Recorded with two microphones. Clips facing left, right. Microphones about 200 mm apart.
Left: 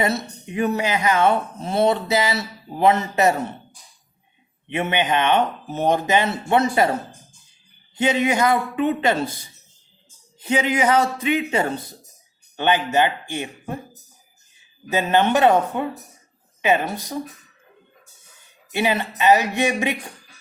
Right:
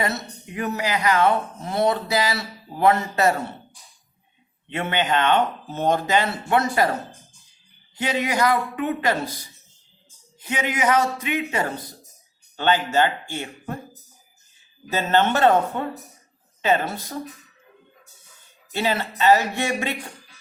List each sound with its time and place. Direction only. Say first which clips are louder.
0.0 s speech: left 4 dB; 20° left (ahead or behind)
4.7 s speech: left 2 dB; 15° left (ahead or behind)
7.9 s speech: left 4 dB; 25° left (ahead or behind)
10.4 s speech: left 4 dB; 30° left (ahead or behind)
14.8 s speech: left 2 dB; 15° left (ahead or behind)
18.7 s speech: left 2 dB; 15° left (ahead or behind)